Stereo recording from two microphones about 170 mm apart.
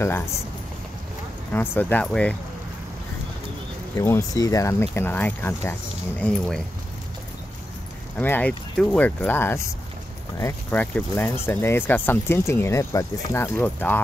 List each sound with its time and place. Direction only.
1.5 s speech: 10° left (ahead or behind)
3.9 s speech: 15° left (ahead or behind)
8.2 s speech: 10° left (ahead or behind)